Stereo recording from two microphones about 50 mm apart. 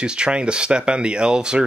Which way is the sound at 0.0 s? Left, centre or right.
Centre.